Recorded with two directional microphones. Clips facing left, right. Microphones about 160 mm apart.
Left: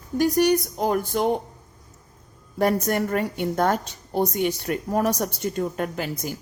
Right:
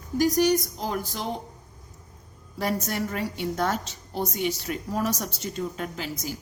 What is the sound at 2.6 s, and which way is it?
A woman's voice, 50° left (ahead or behind).